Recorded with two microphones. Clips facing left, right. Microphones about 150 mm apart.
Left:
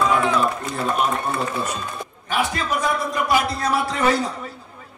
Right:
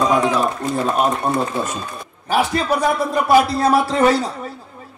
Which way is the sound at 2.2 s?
35° right (ahead or behind).